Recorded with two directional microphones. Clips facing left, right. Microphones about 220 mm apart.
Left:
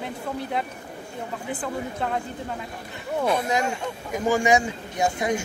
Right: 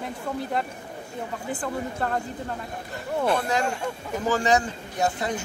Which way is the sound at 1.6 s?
5° left (ahead or behind).